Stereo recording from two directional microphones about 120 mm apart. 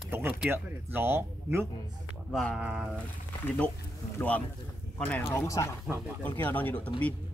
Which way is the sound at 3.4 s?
15° left (ahead or behind).